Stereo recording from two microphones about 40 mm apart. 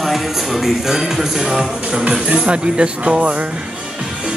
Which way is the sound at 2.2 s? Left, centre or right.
Right.